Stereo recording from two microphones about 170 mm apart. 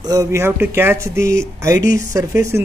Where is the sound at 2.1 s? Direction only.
15° right (ahead or behind).